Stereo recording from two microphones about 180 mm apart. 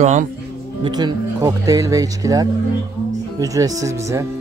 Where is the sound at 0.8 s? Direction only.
25° right (ahead or behind).